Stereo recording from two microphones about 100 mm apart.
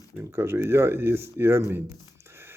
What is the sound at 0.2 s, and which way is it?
A man's voice, 25° right (ahead or behind).